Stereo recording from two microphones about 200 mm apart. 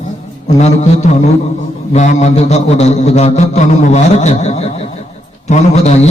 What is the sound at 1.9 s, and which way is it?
A man's voice, 35° left (ahead or behind).